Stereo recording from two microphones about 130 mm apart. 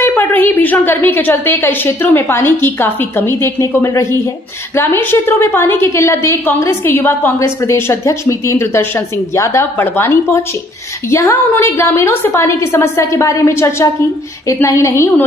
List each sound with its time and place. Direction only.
0.0 s a woman's voice: 15° left (ahead or behind)